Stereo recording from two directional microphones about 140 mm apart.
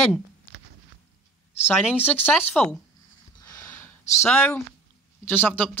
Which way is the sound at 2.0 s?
10° left (ahead or behind).